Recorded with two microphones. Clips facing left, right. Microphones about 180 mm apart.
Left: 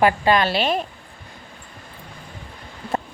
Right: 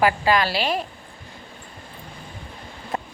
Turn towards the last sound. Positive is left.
turn(degrees=25)  # may be behind; listen again after turning